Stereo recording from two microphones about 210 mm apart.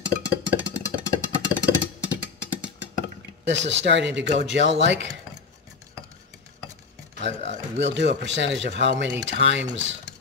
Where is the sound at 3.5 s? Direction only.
60° right (ahead or behind).